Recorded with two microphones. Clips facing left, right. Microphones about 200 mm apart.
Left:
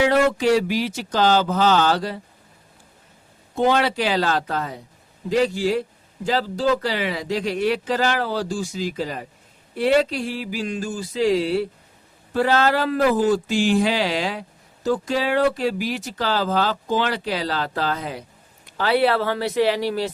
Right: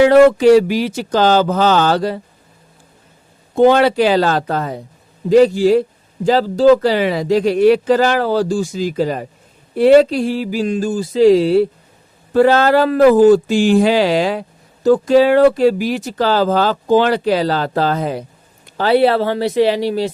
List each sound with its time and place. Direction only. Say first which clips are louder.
0.0 s speech: right 10 dB; 55° right (ahead or behind)
3.5 s speech: right 9 dB; 55° right (ahead or behind)
5.3 s a sound: right 10 dB; 40° right (ahead or behind)
6.2 s speech: right 10 dB; 40° right (ahead or behind)
9.7 s a sound: right 10 dB; 40° right (ahead or behind)
12.3 s speech: right 8 dB; 50° right (ahead or behind)
18.8 s speech: right 6 dB; 30° right (ahead or behind)